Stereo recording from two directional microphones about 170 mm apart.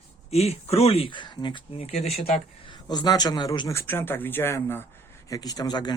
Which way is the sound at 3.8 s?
15° left (ahead or behind).